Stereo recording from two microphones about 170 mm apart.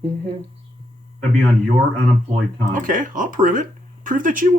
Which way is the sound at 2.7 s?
50° right (ahead or behind).